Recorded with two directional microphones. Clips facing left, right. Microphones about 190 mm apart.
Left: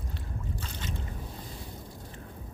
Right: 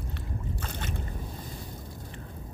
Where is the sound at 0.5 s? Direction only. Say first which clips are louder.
Right 2 dB; 55° right (ahead or behind).